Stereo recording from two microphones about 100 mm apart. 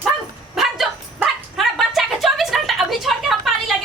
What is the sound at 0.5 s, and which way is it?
Bow-wow, centre (ahead or behind).